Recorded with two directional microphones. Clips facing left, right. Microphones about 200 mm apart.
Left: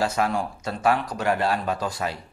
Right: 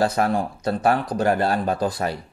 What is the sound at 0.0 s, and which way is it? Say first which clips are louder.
Speech: right 3 dB; 35° right (ahead or behind).